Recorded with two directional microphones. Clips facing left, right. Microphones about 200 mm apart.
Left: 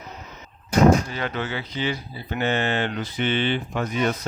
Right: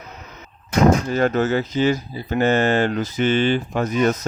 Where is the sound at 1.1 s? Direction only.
45° right (ahead or behind).